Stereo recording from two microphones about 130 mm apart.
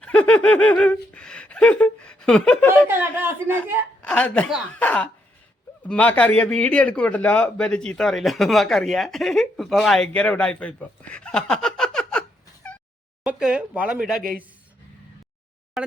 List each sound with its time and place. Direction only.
0.0 s speech: 10° left (ahead or behind)
2.8 s speech: 15° right (ahead or behind)
4.0 s a woman's voice: 10° left (ahead or behind)
13.2 s speech: 10° right (ahead or behind)